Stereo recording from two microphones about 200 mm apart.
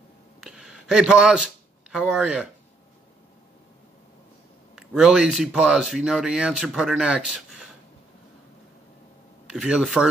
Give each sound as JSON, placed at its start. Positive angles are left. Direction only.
{"t": 0.4, "sound": "a sound", "side_deg": -5}
{"t": 4.7, "sound": "speech", "side_deg": -5}
{"t": 9.5, "sound": "speech", "side_deg": -5}